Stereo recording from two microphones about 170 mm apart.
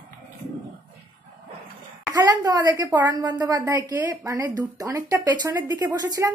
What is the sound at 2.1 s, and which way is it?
A woman's voice, 20° right (ahead or behind).